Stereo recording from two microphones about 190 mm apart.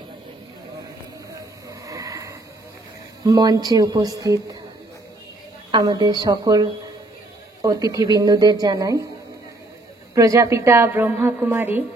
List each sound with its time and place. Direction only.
1.3 s a sound: 15° right (ahead or behind)
3.3 s speech: 20° right (ahead or behind)
5.7 s speech: 20° right (ahead or behind)
10.1 s a woman's voice: 15° right (ahead or behind)